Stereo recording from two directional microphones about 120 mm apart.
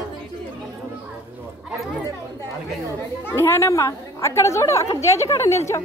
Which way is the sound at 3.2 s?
20° left (ahead or behind).